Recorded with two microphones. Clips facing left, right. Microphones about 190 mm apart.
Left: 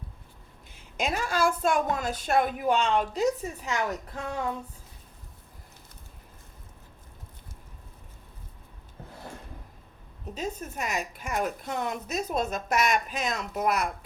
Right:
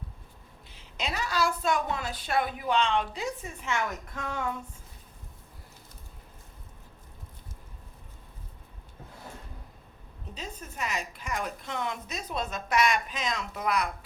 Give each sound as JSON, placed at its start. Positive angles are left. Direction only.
{"t": 0.7, "sound": "a woman's voice", "side_deg": 50}
{"t": 10.3, "sound": "a woman's voice", "side_deg": 45}